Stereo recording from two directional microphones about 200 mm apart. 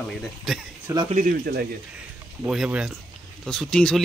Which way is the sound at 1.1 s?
45° right (ahead or behind).